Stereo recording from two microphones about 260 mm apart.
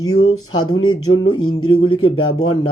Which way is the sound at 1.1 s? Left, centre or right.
Centre.